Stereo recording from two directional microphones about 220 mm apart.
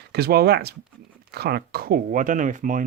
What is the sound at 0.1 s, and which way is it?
Speech, 45° right (ahead or behind).